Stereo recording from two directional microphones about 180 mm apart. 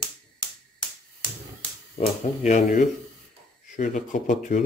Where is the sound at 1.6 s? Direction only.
35° left (ahead or behind).